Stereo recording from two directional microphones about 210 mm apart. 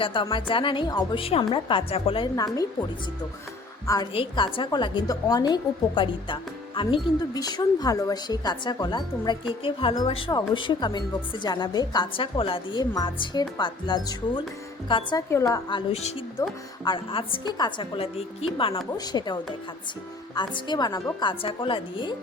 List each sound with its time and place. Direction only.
0.0 s a woman's voice: 25° left (ahead or behind)
3.8 s a woman's voice: 20° left (ahead or behind)
15.9 s a woman's voice: 30° left (ahead or behind)